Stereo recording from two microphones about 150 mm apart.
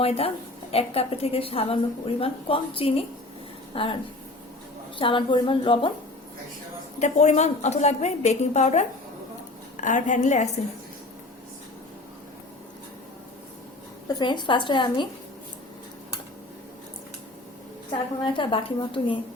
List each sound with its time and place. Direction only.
0.0 s a woman's voice: 40° left (ahead or behind)
4.9 s a woman's voice: 35° left (ahead or behind)
7.0 s a woman's voice: 50° left (ahead or behind)
14.1 s a woman's voice: 30° left (ahead or behind)
18.3 s a woman's voice: 35° left (ahead or behind)